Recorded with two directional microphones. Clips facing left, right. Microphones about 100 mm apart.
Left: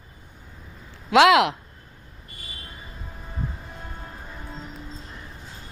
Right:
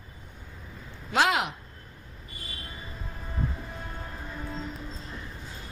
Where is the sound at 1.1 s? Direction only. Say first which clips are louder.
Left 9 dB; 90° left.